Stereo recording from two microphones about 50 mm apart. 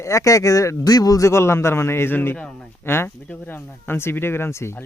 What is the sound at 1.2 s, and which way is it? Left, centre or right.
A man's voice, left.